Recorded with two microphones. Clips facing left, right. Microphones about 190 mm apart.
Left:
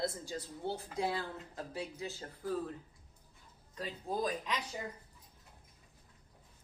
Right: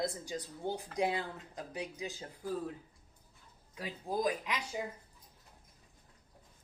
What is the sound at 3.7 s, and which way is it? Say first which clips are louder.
Speech: right 1 dB; 10° right (ahead or behind).